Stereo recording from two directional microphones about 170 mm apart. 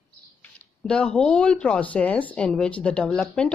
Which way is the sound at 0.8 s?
5° left (ahead or behind).